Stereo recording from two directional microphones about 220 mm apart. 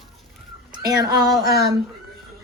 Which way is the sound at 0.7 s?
20° right (ahead or behind).